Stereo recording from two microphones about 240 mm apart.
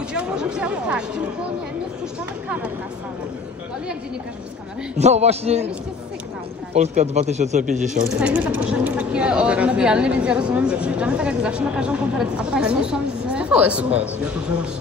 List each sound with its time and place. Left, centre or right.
0.1 s a woman's voice: centre
4.9 s speech: right
6.7 s speech: right
8.2 s a woman's voice: centre